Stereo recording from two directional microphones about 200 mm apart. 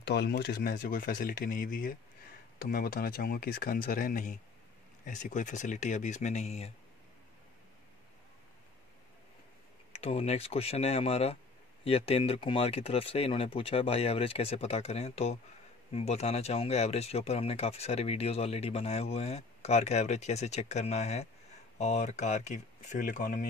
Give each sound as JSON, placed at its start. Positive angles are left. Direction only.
{"t": 0.0, "sound": "speech", "side_deg": 55}
{"t": 9.9, "sound": "speech", "side_deg": 30}